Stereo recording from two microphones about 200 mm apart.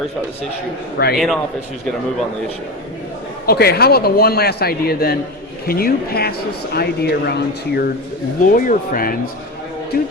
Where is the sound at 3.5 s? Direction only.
50° left (ahead or behind).